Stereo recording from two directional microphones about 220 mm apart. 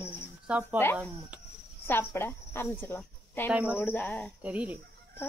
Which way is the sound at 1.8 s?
10° left (ahead or behind).